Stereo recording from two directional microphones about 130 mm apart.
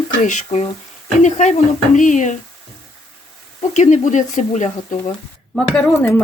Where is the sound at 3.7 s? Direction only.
65° left (ahead or behind).